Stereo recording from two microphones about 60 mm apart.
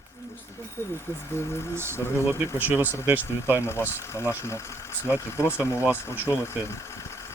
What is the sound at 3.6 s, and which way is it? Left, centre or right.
Speech, left.